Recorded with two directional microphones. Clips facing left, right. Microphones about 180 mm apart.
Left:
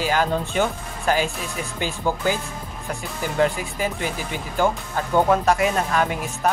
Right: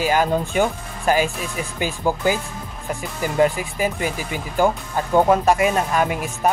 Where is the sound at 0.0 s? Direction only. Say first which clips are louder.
Right 3 dB; 15° right (ahead or behind).